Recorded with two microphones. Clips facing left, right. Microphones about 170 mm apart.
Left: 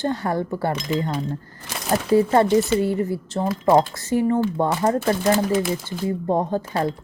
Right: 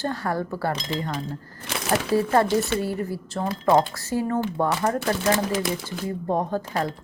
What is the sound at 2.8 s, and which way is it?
A woman's voice, 20° left (ahead or behind).